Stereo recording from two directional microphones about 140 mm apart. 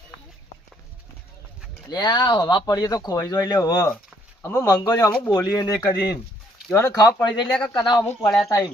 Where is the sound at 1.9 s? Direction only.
30° left (ahead or behind).